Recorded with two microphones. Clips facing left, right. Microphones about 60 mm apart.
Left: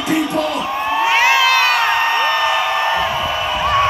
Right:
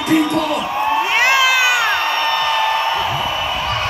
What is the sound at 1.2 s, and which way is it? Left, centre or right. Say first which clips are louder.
Crowd: even; centre.